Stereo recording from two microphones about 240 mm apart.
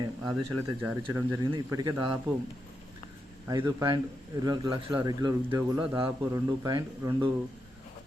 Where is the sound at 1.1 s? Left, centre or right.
Centre.